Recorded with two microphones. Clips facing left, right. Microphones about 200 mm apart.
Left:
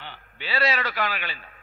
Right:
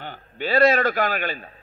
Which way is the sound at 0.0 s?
50° right (ahead or behind).